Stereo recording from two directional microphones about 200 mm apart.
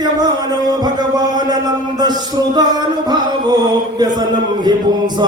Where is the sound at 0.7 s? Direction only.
20° right (ahead or behind).